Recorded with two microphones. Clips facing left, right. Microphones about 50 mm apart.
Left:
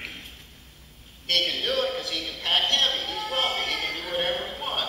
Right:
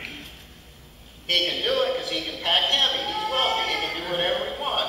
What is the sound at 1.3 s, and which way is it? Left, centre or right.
A man's voice, centre.